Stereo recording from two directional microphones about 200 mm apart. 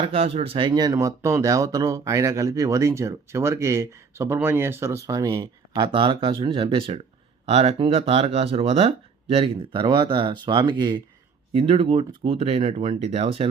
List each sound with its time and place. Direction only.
0.0 s speech: 30° right (ahead or behind)